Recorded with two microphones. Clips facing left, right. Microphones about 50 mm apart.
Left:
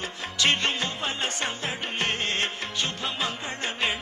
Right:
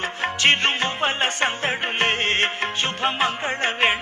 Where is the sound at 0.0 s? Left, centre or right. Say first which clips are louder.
Right 6 dB; right.